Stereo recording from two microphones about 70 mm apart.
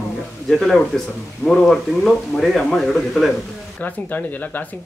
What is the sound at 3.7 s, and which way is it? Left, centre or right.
Speech, left.